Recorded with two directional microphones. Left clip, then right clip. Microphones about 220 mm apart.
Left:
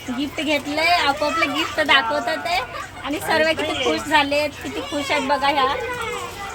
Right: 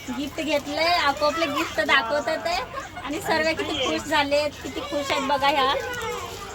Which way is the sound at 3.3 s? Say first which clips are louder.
Left 4 dB; centre (ahead or behind).